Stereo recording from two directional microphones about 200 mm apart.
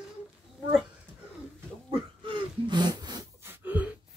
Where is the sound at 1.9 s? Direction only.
25° right (ahead or behind).